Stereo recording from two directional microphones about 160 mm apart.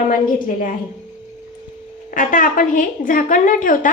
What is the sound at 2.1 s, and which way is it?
A woman's voice, 55° left (ahead or behind).